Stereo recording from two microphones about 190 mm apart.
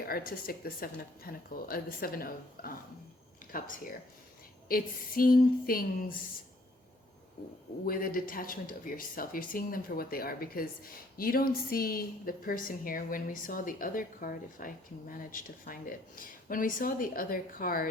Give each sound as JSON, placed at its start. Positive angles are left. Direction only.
{"t": 0.0, "sound": "speech", "side_deg": 50}
{"t": 7.9, "sound": "speech", "side_deg": 50}